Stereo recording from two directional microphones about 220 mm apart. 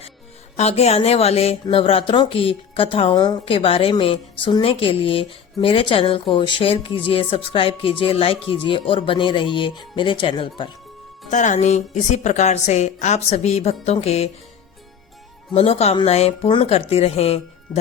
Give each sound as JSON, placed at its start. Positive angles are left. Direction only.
{"t": 0.5, "sound": "speech", "side_deg": 30}
{"t": 11.3, "sound": "a woman's voice", "side_deg": 35}
{"t": 15.5, "sound": "speech", "side_deg": 30}